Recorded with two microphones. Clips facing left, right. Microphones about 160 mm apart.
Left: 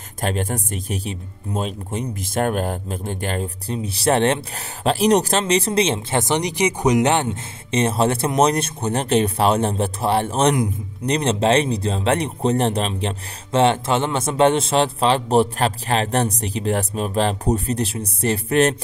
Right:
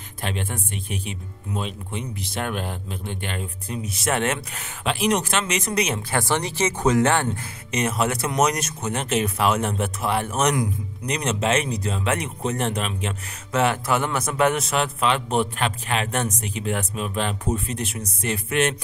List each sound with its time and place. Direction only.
0.2 s speech: 40° left (ahead or behind); by 7.2 s 20° left (ahead or behind)
7.7 s speech: 30° left (ahead or behind)